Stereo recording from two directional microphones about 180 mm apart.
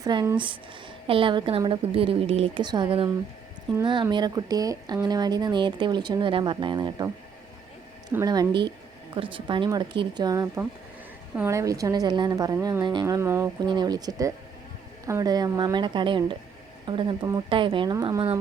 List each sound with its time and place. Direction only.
0.0 s a woman's voice: 20° right (ahead or behind)
8.1 s speech: 20° right (ahead or behind)